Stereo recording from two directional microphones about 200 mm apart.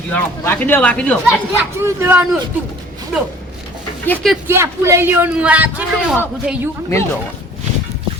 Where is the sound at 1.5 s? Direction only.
10° right (ahead or behind).